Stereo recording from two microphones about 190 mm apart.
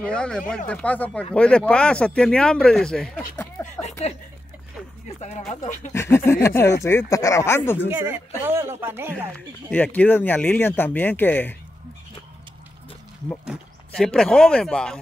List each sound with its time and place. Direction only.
0.0 s speech: 5° left (ahead or behind)
3.3 s a sound: 10° left (ahead or behind)
5.0 s speech: 35° left (ahead or behind)
5.9 s speech: 15° left (ahead or behind)
7.9 s speech: 10° right (ahead or behind)
9.7 s speech: 10° left (ahead or behind)
13.5 s speech: 5° left (ahead or behind)